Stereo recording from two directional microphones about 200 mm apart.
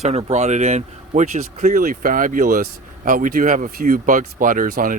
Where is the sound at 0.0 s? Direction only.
30° right (ahead or behind).